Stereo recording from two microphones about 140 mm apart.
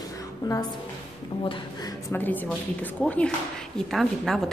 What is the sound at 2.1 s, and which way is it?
A woman's voice, 15° left (ahead or behind).